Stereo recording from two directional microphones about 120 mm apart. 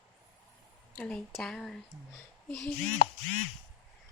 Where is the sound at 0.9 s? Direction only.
10° left (ahead or behind).